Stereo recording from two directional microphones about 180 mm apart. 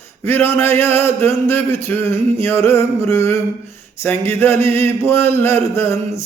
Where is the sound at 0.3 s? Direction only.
10° left (ahead or behind).